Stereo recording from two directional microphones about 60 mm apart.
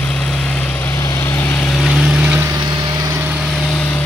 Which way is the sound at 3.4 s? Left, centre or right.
Centre.